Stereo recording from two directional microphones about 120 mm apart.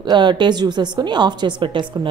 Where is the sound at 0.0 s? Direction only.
40° right (ahead or behind).